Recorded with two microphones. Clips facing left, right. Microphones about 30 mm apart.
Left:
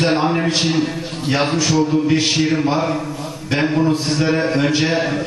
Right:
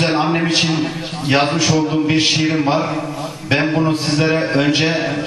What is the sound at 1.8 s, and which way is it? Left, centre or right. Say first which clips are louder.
Music: right 1 dB; right.